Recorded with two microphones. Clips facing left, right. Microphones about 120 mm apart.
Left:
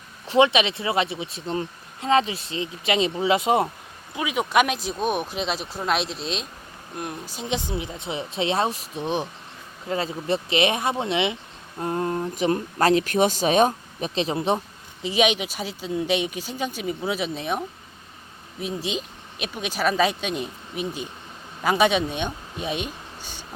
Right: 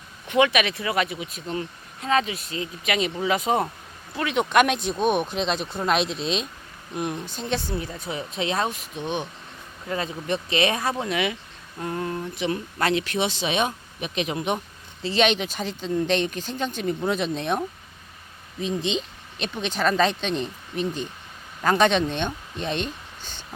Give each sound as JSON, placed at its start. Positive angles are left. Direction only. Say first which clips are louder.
{"t": 0.3, "sound": "speech", "louder": "left 2 dB", "side_deg": 30}
{"t": 4.1, "sound": "speech", "louder": "right 1 dB", "side_deg": 10}
{"t": 15.0, "sound": "speech", "louder": "even", "side_deg": 10}